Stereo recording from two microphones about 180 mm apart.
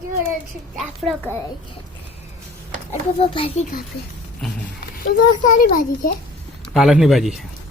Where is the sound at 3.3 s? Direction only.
30° left (ahead or behind).